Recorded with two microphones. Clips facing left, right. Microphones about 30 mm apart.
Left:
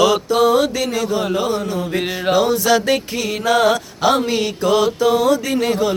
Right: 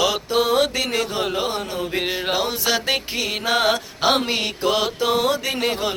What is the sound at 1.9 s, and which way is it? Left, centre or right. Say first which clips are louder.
Mantra: left 5 dB; centre.